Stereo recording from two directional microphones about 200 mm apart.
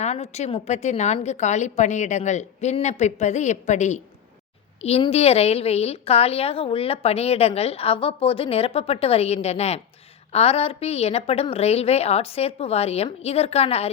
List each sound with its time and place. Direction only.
0.0 s a woman's voice: 35° left (ahead or behind)